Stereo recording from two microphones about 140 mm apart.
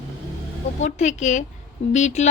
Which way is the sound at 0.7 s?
55° left (ahead or behind).